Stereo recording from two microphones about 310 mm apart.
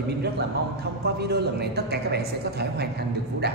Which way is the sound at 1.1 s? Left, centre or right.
Right.